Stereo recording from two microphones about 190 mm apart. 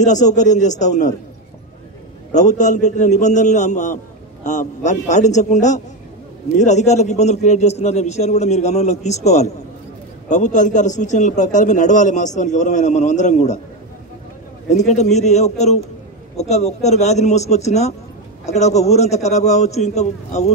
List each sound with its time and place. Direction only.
0.0 s a man's voice: 40° left (ahead or behind)
2.3 s a man's voice: 40° left (ahead or behind)
14.7 s a man's voice: 35° left (ahead or behind)